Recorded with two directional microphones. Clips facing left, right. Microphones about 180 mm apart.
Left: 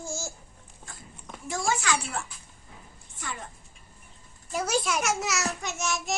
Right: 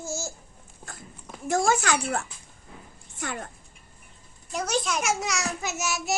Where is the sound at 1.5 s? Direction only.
50° right (ahead or behind).